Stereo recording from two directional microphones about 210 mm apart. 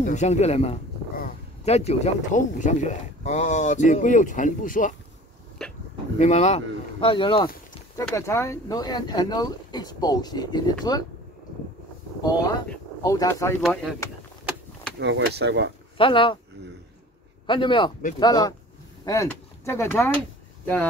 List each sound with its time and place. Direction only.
0.0 s speech: 35° left (ahead or behind)
1.1 s a sound: 45° left (ahead or behind)
1.7 s speech: 30° left (ahead or behind)
6.1 s speech: 35° left (ahead or behind)
8.1 s speech: 15° left (ahead or behind)
12.2 s speech: 20° left (ahead or behind)
13.6 s speech: centre (ahead or behind)
15.0 s speech: 55° right (ahead or behind)
16.0 s speech: 25° left (ahead or behind)
17.5 s speech: 25° left (ahead or behind)